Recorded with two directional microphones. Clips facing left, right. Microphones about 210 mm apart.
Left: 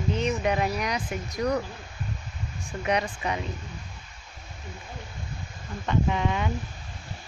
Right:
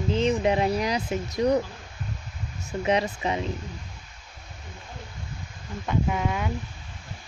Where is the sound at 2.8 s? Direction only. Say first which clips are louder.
Right 3 dB; 25° right (ahead or behind).